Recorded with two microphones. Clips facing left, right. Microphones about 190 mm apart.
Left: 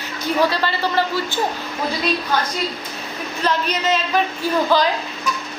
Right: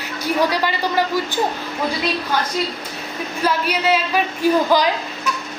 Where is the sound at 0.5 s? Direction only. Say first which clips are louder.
Right 1 dB; 15° right (ahead or behind).